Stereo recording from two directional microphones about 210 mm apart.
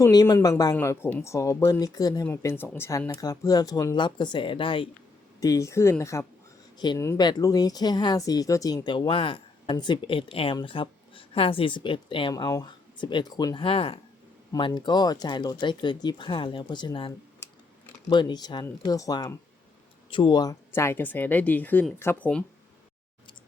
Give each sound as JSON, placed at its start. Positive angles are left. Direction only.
{"t": 0.0, "sound": "speech", "side_deg": 20}
{"t": 18.1, "sound": "speech", "side_deg": 20}